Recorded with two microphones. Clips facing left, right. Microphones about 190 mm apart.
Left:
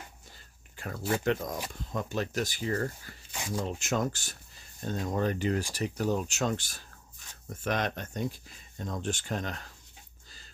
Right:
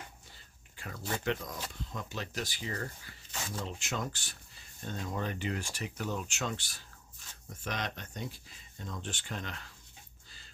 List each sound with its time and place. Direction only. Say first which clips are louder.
1.2 s speech: left 5 dB; 50° left (ahead or behind)
3.3 s speech: left 6 dB; 15° left (ahead or behind)
3.6 s speech: left 9 dB; 45° left (ahead or behind)